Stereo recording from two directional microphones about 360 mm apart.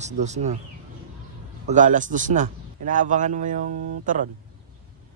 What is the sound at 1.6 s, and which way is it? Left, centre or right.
A man's voice, right.